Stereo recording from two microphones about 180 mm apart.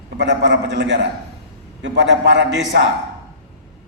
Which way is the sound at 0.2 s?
80° right.